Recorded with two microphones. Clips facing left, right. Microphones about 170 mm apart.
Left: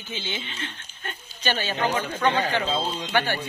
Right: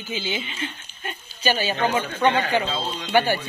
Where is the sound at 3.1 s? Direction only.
10° right (ahead or behind).